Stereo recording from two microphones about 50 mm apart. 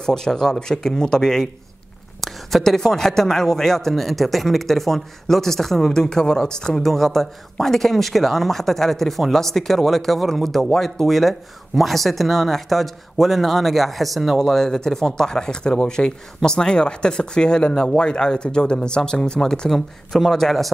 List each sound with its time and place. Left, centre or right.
0.0 s a man's voice: centre
19.7 s a man's voice: centre